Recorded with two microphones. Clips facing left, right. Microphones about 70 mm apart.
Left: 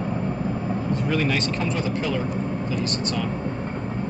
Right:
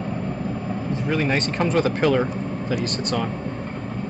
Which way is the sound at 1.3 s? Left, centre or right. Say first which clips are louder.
Right 2 dB; right.